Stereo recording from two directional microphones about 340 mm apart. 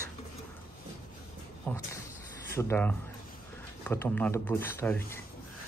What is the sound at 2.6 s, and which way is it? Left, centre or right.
Speech, centre.